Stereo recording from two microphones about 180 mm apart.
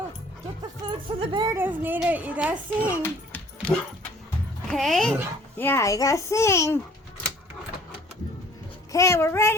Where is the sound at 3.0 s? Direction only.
10° left (ahead or behind).